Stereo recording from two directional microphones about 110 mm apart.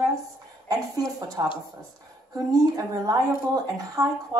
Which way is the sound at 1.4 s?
35° right (ahead or behind).